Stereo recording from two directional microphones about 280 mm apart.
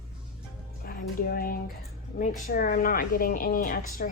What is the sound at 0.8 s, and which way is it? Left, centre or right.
A woman's voice, left.